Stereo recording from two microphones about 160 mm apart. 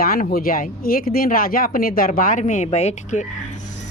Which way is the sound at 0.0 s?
65° left (ahead or behind).